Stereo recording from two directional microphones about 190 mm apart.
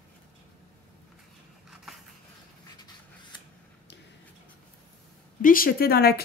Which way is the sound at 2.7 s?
20° left (ahead or behind).